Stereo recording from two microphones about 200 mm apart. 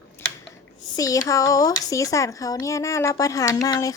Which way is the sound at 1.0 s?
15° left (ahead or behind).